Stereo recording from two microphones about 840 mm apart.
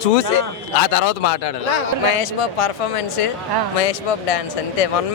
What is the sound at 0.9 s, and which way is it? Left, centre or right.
Speech, left.